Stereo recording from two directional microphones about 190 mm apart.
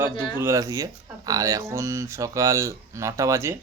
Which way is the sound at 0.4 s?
15° right (ahead or behind).